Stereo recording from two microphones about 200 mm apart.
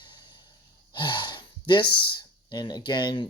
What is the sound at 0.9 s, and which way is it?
Speech, 25° left (ahead or behind).